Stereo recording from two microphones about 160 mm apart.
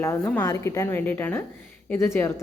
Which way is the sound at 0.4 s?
20° left (ahead or behind).